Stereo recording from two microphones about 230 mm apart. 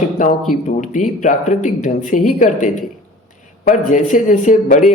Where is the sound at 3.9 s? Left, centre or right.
Left.